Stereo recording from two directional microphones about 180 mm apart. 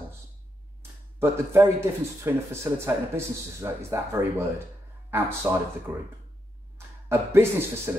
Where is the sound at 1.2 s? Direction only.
15° right (ahead or behind).